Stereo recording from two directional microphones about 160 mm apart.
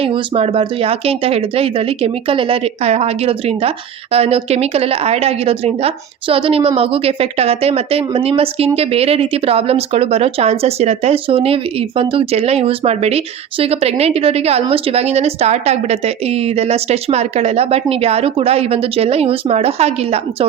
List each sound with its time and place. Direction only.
0.0 s a woman's voice: 35° right (ahead or behind)